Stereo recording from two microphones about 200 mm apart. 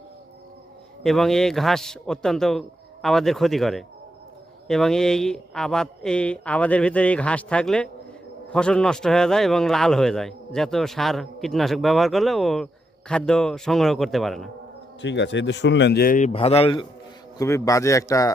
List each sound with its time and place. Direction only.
1.0 s a man's voice: centre (ahead or behind)
15.0 s speech: 60° left (ahead or behind); by 16.8 s 30° left (ahead or behind)
17.3 s a man's voice: 15° left (ahead or behind)